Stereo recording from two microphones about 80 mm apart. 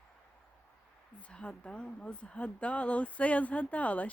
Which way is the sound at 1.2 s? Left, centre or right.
Centre.